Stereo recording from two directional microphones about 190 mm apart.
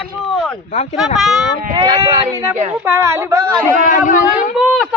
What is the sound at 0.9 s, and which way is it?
Speech, centre (ahead or behind).